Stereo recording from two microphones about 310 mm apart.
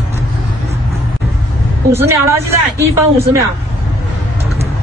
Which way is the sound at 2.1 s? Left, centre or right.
Centre.